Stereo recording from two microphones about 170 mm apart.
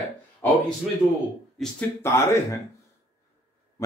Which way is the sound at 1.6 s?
Centre (ahead or behind).